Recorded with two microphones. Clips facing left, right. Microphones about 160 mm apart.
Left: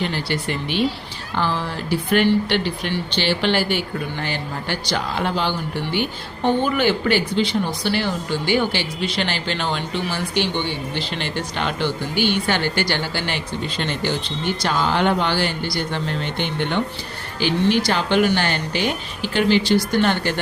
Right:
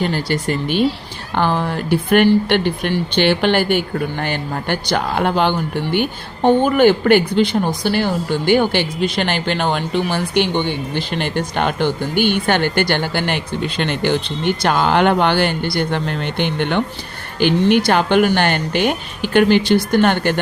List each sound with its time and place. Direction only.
0.0 s speech: 45° right (ahead or behind)
1.4 s speech: 55° right (ahead or behind)